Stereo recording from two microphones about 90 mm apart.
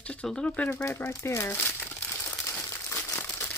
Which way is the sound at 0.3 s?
10° left (ahead or behind).